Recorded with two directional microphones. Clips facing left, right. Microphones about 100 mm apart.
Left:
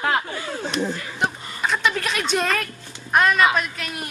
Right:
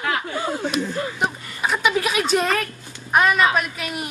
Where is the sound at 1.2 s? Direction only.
10° right (ahead or behind).